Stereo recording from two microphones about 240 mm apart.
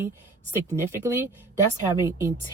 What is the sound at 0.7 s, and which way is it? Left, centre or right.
Speech, centre.